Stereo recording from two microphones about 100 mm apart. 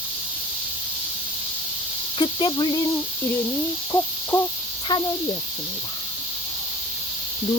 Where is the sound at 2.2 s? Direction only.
50° left (ahead or behind).